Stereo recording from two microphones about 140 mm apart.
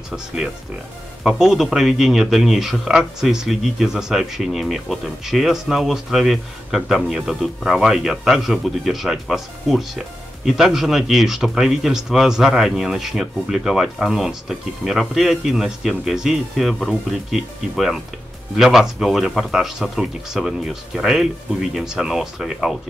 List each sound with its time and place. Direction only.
1.2 s speech: 5° right (ahead or behind)